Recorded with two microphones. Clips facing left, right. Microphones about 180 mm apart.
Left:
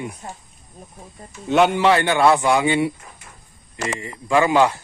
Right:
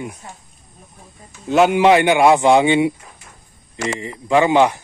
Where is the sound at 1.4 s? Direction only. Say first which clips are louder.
Right 2 dB; centre (ahead or behind).